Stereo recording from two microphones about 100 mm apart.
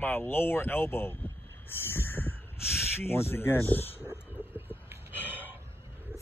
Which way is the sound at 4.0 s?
20° right (ahead or behind).